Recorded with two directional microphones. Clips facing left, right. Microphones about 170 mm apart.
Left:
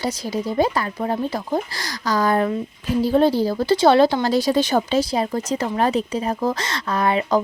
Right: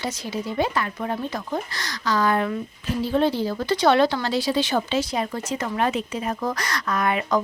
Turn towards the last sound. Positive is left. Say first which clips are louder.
# left 3 dB
turn(degrees=30)  # may be behind; listen again after turning